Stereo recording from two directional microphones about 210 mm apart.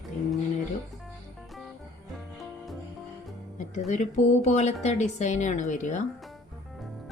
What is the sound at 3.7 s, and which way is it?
A woman's voice, 35° left (ahead or behind).